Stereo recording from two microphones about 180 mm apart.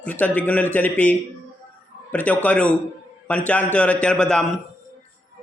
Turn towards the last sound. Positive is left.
turn(degrees=5)  # may be behind; listen again after turning